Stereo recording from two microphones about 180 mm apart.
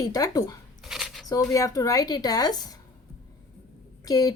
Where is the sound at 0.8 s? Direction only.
Centre (ahead or behind).